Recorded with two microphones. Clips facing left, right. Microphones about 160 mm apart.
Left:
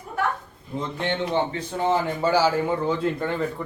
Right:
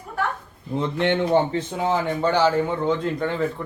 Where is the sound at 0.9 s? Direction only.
60° right (ahead or behind).